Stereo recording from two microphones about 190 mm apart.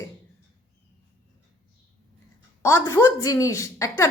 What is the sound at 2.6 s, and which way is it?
A woman's voice, 15° left (ahead or behind).